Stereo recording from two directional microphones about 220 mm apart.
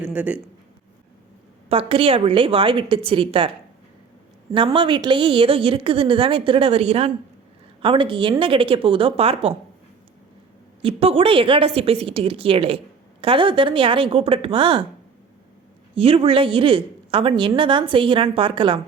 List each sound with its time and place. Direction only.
0.0 s a man's voice: 5° right (ahead or behind)
1.7 s a woman's voice: 25° right (ahead or behind)
4.5 s a woman's voice: 25° right (ahead or behind)
10.8 s a woman's voice: 25° right (ahead or behind)
16.0 s a woman's voice: 25° right (ahead or behind)